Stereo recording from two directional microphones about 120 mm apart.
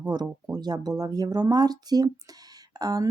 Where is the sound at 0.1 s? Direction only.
35° right (ahead or behind).